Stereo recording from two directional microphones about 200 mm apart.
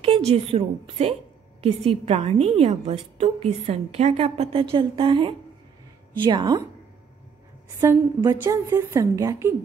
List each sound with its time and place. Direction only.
0.0 s a woman's voice: 30° right (ahead or behind)
7.8 s a woman's voice: 20° right (ahead or behind)